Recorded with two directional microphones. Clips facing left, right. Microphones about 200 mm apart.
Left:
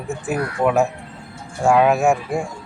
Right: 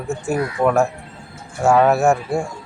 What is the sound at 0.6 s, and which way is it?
Speech, centre (ahead or behind).